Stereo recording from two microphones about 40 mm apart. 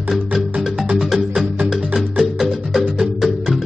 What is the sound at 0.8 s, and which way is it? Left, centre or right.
Music, centre.